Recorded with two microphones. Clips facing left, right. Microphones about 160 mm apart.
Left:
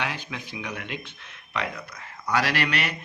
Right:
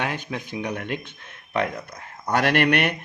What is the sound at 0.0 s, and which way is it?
Speech, 50° right (ahead or behind).